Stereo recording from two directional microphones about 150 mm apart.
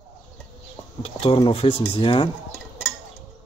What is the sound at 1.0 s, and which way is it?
Speech, 35° left (ahead or behind).